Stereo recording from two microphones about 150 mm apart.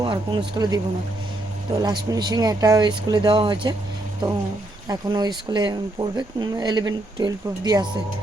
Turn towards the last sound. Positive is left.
turn(degrees=-30)  # may be behind; listen again after turning